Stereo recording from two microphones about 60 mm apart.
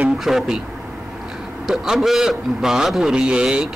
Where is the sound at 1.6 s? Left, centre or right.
Centre.